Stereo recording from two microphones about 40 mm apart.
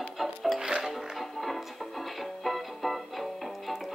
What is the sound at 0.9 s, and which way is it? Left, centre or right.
Music, centre.